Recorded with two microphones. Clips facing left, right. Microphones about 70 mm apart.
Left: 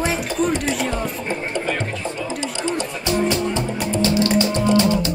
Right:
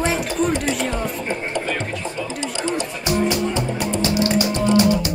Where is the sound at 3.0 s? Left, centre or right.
Right.